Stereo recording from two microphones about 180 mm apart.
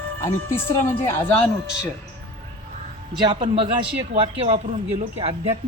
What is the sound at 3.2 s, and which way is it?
A man's voice, 25° right (ahead or behind).